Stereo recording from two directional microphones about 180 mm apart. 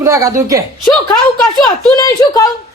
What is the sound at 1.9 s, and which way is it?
Speech, 20° left (ahead or behind).